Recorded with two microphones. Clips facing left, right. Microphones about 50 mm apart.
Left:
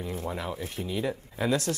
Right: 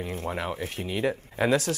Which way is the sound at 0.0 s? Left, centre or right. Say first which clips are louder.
Right 2 dB; right.